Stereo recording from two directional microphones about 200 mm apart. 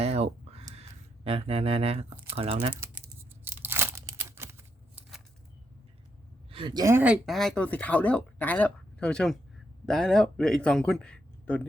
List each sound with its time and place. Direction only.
0.0 s a sound: 30° right (ahead or behind)
0.8 s speech: 30° right (ahead or behind)
2.8 s tearing: 10° right (ahead or behind)
6.5 s a man's voice: 25° right (ahead or behind); by 11.6 s 5° left (ahead or behind)